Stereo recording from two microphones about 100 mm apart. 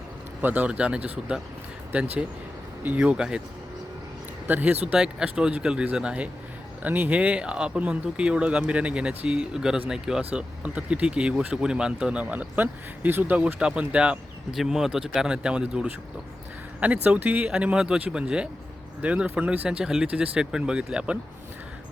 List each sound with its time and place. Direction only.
0.4 s speech: 15° right (ahead or behind)
4.4 s speech: 15° right (ahead or behind)